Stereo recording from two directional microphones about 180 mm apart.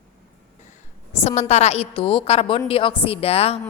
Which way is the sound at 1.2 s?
35° left (ahead or behind).